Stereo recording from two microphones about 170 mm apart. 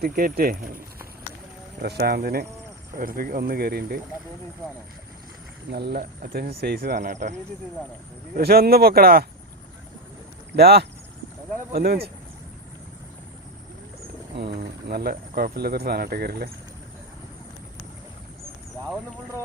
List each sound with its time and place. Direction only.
0.0 s speech: 60° right (ahead or behind)
1.8 s speech: 70° right (ahead or behind)
5.7 s speech: 65° right (ahead or behind); by 7.3 s 50° right (ahead or behind)
8.4 s speech: 65° right (ahead or behind)
10.5 s speech: 65° right (ahead or behind)
14.3 s speech: 70° right (ahead or behind)